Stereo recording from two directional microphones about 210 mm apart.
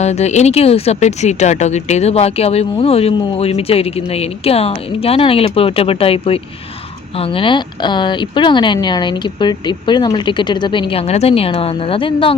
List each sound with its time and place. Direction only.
0.0 s speech: 30° left (ahead or behind)